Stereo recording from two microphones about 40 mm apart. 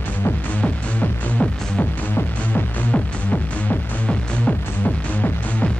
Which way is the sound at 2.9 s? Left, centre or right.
Left.